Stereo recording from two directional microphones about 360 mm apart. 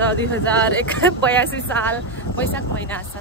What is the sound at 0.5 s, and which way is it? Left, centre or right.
Speech, centre.